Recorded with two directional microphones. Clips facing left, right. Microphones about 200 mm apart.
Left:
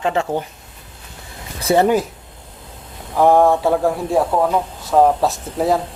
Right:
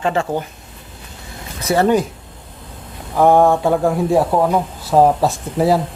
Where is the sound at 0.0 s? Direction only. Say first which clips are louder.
Right 1 dB; 15° left (ahead or behind).